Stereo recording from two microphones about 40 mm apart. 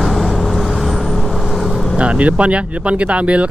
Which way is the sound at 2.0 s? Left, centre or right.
Right.